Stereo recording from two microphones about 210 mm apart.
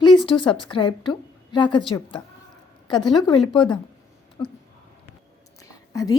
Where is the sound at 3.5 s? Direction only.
20° left (ahead or behind).